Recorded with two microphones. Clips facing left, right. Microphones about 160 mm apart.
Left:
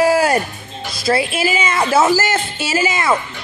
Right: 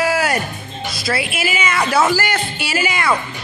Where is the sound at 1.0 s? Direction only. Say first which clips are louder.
Left 5 dB; 30° left (ahead or behind).